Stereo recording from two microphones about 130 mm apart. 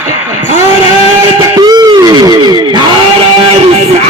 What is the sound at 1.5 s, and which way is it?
Music, 30° right (ahead or behind).